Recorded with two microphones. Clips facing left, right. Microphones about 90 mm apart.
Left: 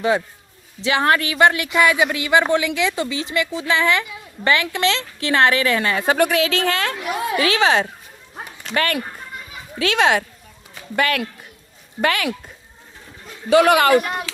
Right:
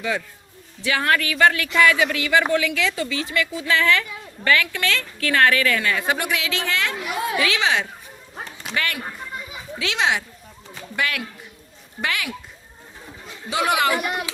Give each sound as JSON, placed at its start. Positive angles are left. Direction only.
{"t": 0.9, "sound": "speech", "side_deg": 25}
{"t": 8.7, "sound": "a child's voice", "side_deg": 50}
{"t": 13.5, "sound": "speech", "side_deg": 60}